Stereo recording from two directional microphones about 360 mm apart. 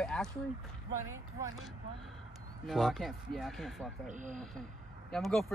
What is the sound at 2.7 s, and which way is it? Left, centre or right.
Speech, centre.